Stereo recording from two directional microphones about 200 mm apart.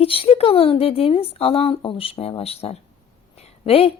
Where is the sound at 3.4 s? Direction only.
30° left (ahead or behind).